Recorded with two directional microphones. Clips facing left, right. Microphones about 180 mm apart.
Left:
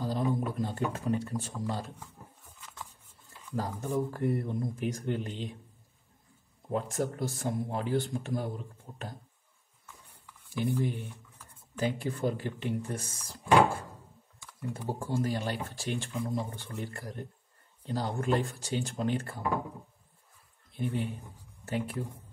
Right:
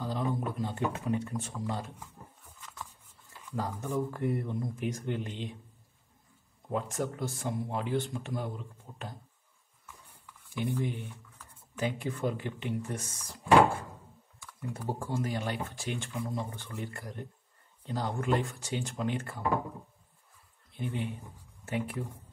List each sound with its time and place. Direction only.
0.0 s a sound: 35° left (ahead or behind)
0.6 s speech: 40° left (ahead or behind)
3.5 s speech: 35° left (ahead or behind)
6.7 s speech: 40° left (ahead or behind)
10.5 s speech: 35° left (ahead or behind)
14.4 s speech: 25° left (ahead or behind)
20.7 s speech: 35° left (ahead or behind)